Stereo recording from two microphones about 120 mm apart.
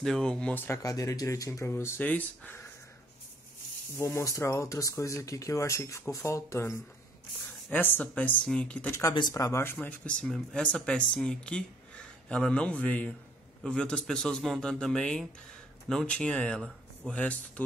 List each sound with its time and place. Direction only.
0.0 s speech: 5° left (ahead or behind)
0.7 s speech: 25° left (ahead or behind)
3.9 s speech: 25° left (ahead or behind)
7.7 s speech: 15° left (ahead or behind)
9.3 s speech: 25° left (ahead or behind)
9.8 s a man's voice: 10° left (ahead or behind)